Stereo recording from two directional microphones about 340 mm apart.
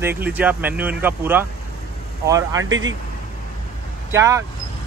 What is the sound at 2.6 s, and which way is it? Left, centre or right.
Speech, right.